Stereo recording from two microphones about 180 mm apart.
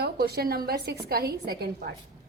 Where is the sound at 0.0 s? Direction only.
60° right (ahead or behind).